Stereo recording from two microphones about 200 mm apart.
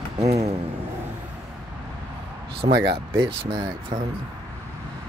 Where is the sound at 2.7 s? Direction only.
55° right (ahead or behind).